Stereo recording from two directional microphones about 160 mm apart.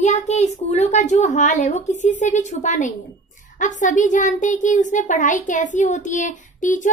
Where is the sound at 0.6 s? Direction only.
45° left (ahead or behind).